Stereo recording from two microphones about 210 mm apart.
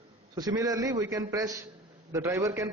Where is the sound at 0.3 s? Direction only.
15° right (ahead or behind).